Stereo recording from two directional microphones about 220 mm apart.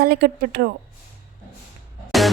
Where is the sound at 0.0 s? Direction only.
45° right (ahead or behind).